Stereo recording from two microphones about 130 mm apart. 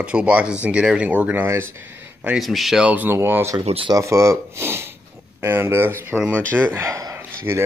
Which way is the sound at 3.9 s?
25° right (ahead or behind).